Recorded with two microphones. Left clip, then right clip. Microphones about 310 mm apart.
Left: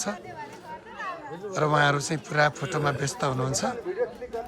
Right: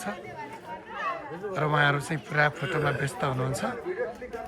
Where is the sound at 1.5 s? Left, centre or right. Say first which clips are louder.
Left 2 dB; centre.